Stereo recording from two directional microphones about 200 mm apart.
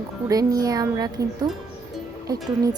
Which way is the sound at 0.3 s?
15° right (ahead or behind).